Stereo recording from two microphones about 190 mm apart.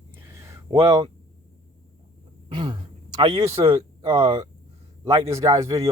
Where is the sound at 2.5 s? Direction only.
20° right (ahead or behind).